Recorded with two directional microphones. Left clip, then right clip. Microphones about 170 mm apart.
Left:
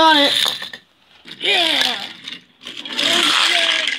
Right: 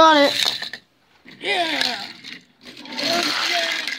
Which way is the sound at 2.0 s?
40° right (ahead or behind).